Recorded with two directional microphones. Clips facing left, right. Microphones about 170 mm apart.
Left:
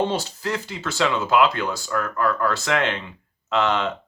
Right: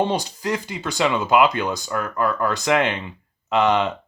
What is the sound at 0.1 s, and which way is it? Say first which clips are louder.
Speech: right 2 dB; 15° right (ahead or behind).